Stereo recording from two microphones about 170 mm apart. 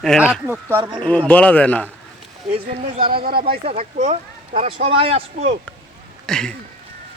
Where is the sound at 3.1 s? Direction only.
65° right (ahead or behind).